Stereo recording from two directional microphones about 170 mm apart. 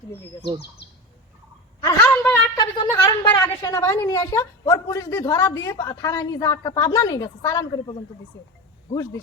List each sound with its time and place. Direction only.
0.4 s speech: 75° left (ahead or behind)
2.0 s a sound: 10° left (ahead or behind)
2.6 s a woman's voice: 20° left (ahead or behind)